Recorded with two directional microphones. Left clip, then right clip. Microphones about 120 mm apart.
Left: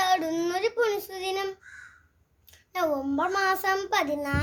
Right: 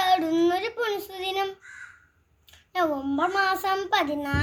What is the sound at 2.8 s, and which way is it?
A child's voice, 45° left (ahead or behind).